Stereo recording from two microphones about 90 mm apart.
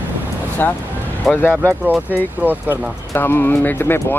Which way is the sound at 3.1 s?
25° left (ahead or behind).